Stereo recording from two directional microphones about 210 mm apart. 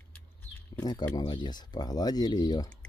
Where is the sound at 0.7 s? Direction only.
20° left (ahead or behind).